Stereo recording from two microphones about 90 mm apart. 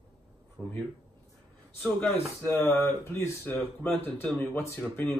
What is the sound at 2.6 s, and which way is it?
Speech, 25° left (ahead or behind).